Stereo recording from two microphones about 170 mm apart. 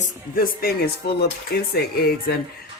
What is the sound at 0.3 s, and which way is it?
Speech, 60° left (ahead or behind).